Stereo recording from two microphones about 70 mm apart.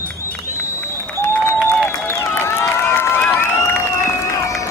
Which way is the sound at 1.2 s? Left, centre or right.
Left.